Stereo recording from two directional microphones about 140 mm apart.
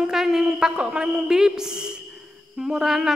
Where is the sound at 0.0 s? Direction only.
5° right (ahead or behind).